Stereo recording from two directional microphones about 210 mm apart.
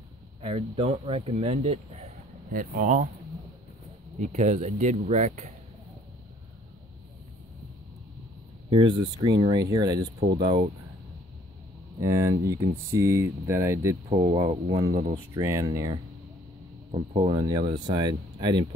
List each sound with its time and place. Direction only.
0.4 s speech: 25° right (ahead or behind)
4.2 s speech: 35° right (ahead or behind)
8.6 s speech: 25° right (ahead or behind)
12.0 s speech: 15° right (ahead or behind)
14.2 s speech: 30° right (ahead or behind)
14.7 s speech: 20° right (ahead or behind)
17.1 s speech: 25° right (ahead or behind)